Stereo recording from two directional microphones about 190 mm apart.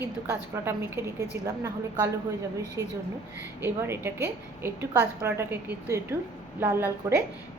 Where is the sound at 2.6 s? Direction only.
15° left (ahead or behind).